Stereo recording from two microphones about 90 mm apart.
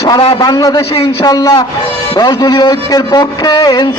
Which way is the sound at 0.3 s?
45° left (ahead or behind).